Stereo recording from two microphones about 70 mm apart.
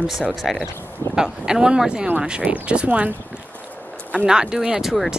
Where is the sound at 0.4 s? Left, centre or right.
Centre.